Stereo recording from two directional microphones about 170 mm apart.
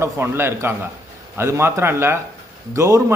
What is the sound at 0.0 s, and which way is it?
A man's voice, 15° right (ahead or behind).